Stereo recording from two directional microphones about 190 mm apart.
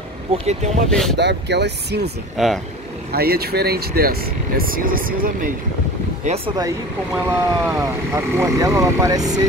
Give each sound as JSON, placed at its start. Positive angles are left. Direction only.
{"t": 0.3, "sound": "speech", "side_deg": -30}
{"t": 0.8, "sound": "speech", "side_deg": 5}
{"t": 1.1, "sound": "speech", "side_deg": -65}
{"t": 2.3, "sound": "speech", "side_deg": 0}
{"t": 3.1, "sound": "speech", "side_deg": -55}
{"t": 6.2, "sound": "speech", "side_deg": -30}
{"t": 7.2, "sound": "speech", "side_deg": -10}